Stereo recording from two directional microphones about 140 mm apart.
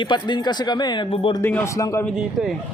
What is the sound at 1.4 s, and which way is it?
Speech, 15° left (ahead or behind).